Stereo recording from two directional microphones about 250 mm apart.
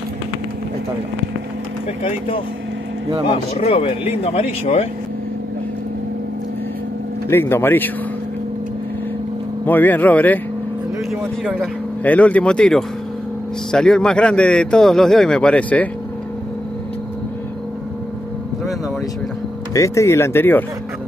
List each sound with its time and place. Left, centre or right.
2.0 s speech: left
7.2 s speech: centre
9.7 s a man's voice: centre
19.7 s speech: centre